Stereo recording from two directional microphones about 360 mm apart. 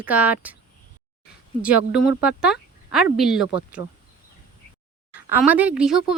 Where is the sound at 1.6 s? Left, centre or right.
Centre.